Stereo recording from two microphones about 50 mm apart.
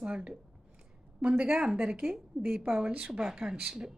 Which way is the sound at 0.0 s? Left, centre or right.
Right.